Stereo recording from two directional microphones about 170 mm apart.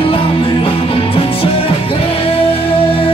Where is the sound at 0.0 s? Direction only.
35° left (ahead or behind).